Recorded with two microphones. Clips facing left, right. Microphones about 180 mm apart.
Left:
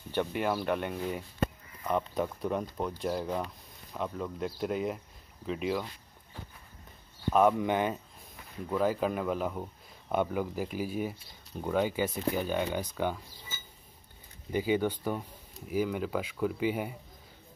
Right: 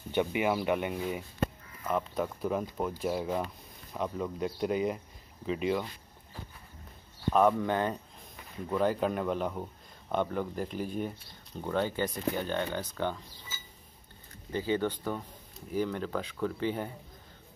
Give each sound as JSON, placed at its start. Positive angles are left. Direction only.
{"t": 0.1, "sound": "speech", "side_deg": -10}
{"t": 7.3, "sound": "speech", "side_deg": 5}
{"t": 7.6, "sound": "speech", "side_deg": 15}
{"t": 8.6, "sound": "speech", "side_deg": 0}
{"t": 14.5, "sound": "speech", "side_deg": 10}